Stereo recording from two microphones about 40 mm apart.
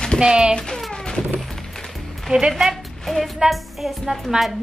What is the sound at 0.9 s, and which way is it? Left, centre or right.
Music, left.